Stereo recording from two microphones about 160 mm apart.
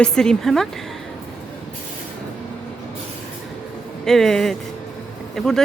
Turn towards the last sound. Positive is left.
turn(degrees=5)  # may be behind; listen again after turning